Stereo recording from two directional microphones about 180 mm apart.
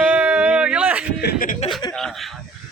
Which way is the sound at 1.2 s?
55° left (ahead or behind).